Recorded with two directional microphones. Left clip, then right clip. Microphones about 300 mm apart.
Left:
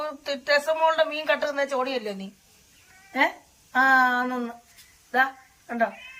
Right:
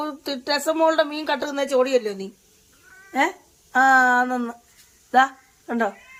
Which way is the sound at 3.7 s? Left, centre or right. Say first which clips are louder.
Right 4 dB; centre.